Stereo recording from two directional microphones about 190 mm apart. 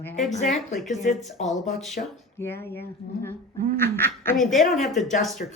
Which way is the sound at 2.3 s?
10° left (ahead or behind).